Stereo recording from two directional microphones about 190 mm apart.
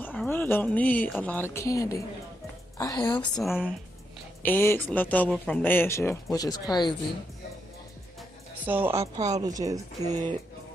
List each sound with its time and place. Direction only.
0.0 s a woman's voice: 10° left (ahead or behind)
3.3 s speech: centre (ahead or behind)
4.4 s speech: 10° left (ahead or behind)
8.6 s a woman's voice: 10° right (ahead or behind)